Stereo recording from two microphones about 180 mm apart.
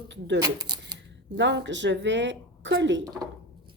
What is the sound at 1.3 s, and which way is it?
Speech, 75° right (ahead or behind).